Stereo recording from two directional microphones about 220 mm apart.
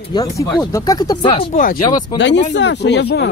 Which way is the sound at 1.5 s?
40° left (ahead or behind).